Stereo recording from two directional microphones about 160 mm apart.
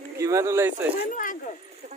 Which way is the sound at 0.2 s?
20° right (ahead or behind).